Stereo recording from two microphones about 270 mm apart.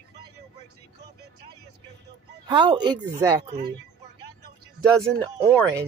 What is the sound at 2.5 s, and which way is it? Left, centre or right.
Speech, centre.